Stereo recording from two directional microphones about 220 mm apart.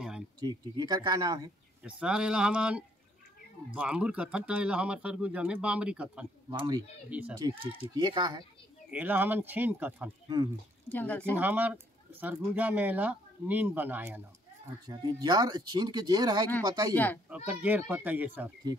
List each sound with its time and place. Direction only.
0.4 s speech: 20° right (ahead or behind)
1.8 s speech: 5° right (ahead or behind)
6.5 s speech: 20° right (ahead or behind)
7.1 s speech: 5° right (ahead or behind)
8.9 s speech: 10° right (ahead or behind)
10.2 s speech: 20° right (ahead or behind)
10.9 s speech: 5° left (ahead or behind)
11.3 s speech: 10° right (ahead or behind)
16.9 s speech: 10° left (ahead or behind)
17.5 s speech: 5° right (ahead or behind)